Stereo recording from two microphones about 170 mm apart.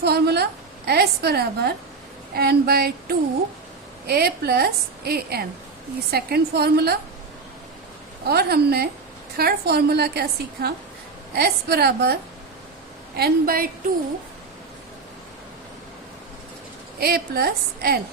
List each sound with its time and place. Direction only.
0.0 s a woman's voice: 70° right (ahead or behind)
8.3 s a woman's voice: 65° right (ahead or behind)
17.0 s a woman's voice: 65° right (ahead or behind)